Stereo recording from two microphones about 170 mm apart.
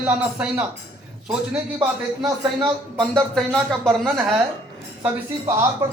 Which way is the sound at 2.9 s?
5° left (ahead or behind).